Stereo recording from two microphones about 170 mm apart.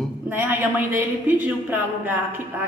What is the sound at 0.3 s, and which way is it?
A woman's voice, 10° right (ahead or behind).